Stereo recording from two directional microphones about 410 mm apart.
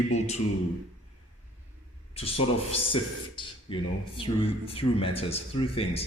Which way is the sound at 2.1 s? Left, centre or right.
Centre.